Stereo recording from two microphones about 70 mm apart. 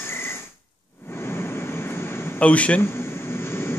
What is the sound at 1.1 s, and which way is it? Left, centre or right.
Vehicle, left.